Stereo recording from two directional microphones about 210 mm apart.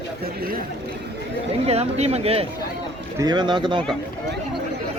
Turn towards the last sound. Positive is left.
turn(degrees=-25)  # may be behind; listen again after turning